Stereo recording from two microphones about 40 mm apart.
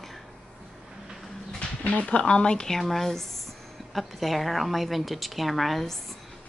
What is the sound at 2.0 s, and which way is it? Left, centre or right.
Speech, left.